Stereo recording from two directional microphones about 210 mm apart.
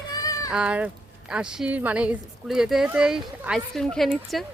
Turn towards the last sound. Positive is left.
turn(degrees=0)  # may be behind; listen again after turning